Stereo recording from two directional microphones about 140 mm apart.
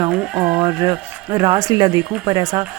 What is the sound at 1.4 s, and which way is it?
Speech, 30° right (ahead or behind).